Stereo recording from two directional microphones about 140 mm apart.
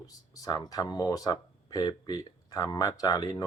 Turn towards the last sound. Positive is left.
turn(degrees=25)  # may be behind; listen again after turning